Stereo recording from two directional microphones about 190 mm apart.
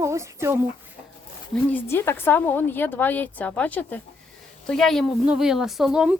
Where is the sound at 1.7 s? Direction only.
10° left (ahead or behind).